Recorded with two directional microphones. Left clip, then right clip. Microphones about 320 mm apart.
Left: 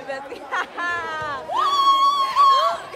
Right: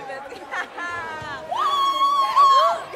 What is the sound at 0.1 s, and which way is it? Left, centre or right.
Chatter, left.